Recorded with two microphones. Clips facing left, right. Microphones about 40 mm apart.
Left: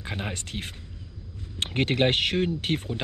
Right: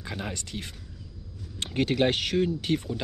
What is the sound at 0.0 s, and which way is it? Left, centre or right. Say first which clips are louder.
Speech: left 2 dB; left.